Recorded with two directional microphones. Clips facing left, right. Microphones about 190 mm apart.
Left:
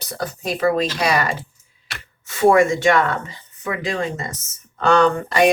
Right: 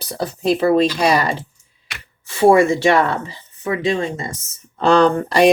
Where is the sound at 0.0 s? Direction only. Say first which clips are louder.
Right 6 dB; 30° right (ahead or behind).